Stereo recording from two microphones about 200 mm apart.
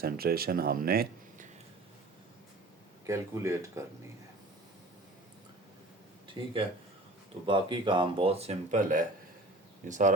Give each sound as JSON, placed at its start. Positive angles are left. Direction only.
{"t": 0.0, "sound": "speech", "side_deg": -50}
{"t": 3.1, "sound": "speech", "side_deg": -15}
{"t": 6.2, "sound": "speech", "side_deg": -25}